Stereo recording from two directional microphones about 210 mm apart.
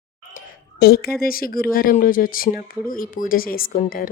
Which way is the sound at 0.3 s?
45° left (ahead or behind).